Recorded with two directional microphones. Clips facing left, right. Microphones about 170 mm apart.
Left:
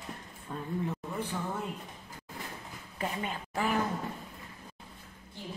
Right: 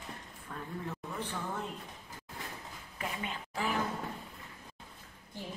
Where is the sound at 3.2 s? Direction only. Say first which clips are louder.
Left 2 dB; 50° left (ahead or behind).